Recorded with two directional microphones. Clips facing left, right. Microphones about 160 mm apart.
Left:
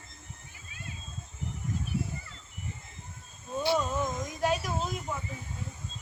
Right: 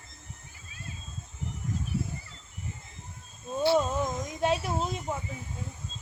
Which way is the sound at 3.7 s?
20° right (ahead or behind).